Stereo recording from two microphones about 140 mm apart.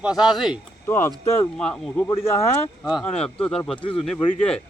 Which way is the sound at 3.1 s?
5° left (ahead or behind).